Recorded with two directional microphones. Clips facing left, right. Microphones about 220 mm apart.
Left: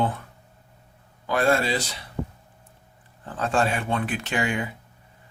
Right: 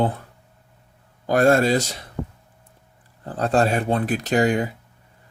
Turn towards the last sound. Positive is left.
turn(degrees=-40)  # may be behind; listen again after turning